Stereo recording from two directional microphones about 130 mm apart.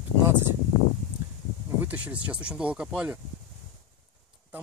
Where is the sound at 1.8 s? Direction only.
10° right (ahead or behind).